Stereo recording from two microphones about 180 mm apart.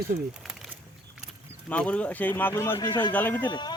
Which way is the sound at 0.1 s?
55° right (ahead or behind).